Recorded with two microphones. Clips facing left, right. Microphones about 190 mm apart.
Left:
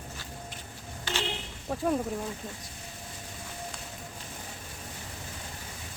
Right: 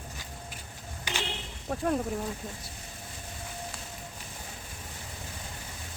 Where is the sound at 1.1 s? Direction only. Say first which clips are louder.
Left 2 dB; 15° right (ahead or behind).